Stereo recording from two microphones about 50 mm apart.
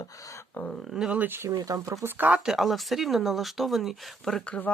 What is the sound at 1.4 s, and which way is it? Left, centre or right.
Speech, right.